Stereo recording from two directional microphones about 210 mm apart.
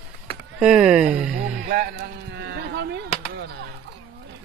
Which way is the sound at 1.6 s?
45° right (ahead or behind).